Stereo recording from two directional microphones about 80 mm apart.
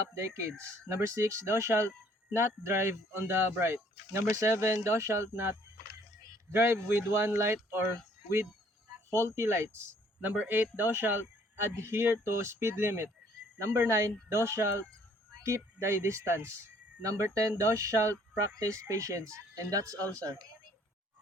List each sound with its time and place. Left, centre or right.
0.1 s speech: right
6.5 s a man's voice: right